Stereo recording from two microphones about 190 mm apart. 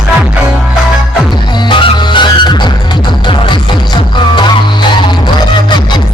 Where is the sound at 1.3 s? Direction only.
25° left (ahead or behind).